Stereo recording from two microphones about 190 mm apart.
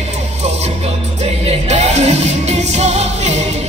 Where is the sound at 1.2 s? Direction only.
35° right (ahead or behind).